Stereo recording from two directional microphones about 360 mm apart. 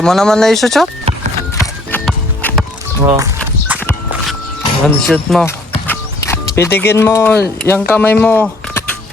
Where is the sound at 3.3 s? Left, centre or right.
Centre.